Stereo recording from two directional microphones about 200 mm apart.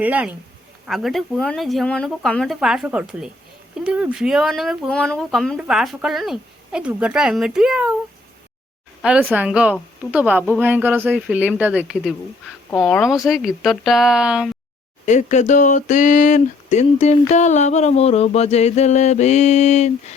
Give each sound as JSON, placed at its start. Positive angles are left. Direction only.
{"t": 0.0, "sound": "speech", "side_deg": -5}
{"t": 9.0, "sound": "speech", "side_deg": -5}
{"t": 15.0, "sound": "speech", "side_deg": 35}